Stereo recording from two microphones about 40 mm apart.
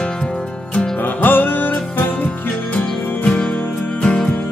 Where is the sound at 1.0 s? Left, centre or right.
Left.